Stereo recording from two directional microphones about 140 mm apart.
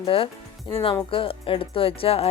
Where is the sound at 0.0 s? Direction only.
40° left (ahead or behind).